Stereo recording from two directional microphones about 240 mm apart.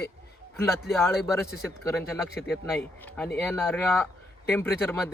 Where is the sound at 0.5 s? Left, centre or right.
Centre.